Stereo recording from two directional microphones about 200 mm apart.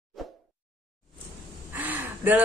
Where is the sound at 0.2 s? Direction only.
Centre (ahead or behind).